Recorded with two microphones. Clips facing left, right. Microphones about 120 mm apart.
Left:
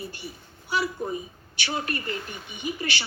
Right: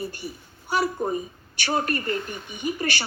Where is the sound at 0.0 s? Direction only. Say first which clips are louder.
Right 5 dB; 45° right (ahead or behind).